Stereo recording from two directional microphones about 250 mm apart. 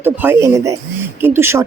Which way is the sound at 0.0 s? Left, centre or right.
Centre.